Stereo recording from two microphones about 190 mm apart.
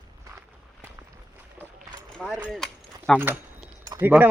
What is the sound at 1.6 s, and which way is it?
Boat, 10° left (ahead or behind).